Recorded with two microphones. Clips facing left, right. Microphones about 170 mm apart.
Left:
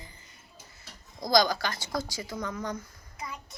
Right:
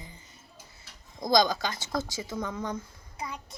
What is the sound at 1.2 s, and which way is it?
Speech, 20° right (ahead or behind).